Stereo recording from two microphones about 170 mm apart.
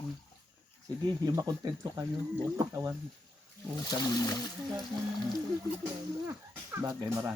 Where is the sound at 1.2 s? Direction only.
25° right (ahead or behind).